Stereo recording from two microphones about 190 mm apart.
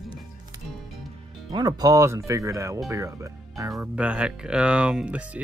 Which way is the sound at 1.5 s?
20° right (ahead or behind).